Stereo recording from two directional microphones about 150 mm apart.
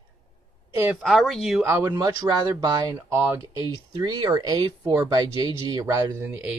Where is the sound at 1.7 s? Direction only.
20° right (ahead or behind).